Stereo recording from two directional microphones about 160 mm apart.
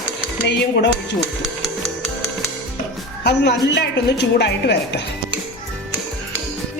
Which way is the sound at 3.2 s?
90° left.